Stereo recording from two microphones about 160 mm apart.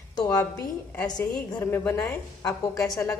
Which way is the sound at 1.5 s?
15° left (ahead or behind).